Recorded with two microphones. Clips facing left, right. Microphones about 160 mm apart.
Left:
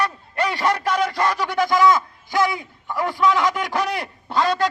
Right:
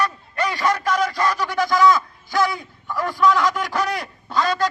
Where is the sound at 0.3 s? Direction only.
30° left (ahead or behind).